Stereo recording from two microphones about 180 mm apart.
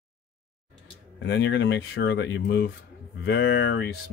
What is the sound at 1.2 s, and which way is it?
Speech, 85° left.